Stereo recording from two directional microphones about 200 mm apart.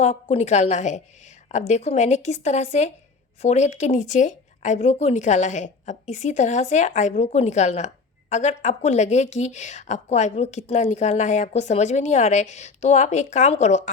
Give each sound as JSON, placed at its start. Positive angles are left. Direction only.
{"t": 0.0, "sound": "a woman's voice", "side_deg": 35}